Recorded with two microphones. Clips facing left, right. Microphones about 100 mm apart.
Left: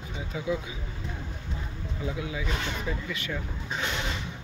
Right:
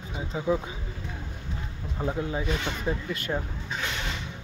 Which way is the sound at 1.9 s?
45° right (ahead or behind).